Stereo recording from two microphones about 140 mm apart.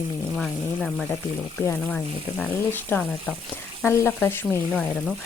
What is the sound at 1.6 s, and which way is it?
Speech, 15° left (ahead or behind).